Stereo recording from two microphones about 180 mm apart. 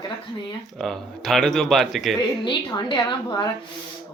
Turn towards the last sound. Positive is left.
turn(degrees=25)  # may be behind; listen again after turning